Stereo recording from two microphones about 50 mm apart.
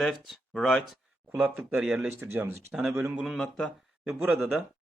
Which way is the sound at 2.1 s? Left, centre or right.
Right.